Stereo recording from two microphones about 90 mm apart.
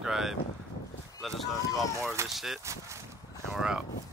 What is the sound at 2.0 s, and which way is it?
Speech, 30° right (ahead or behind).